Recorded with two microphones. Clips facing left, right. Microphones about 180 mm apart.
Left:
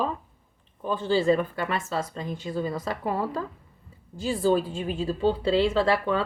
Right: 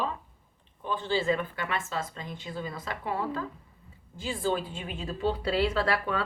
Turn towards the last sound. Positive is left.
turn(degrees=25)  # may be behind; listen again after turning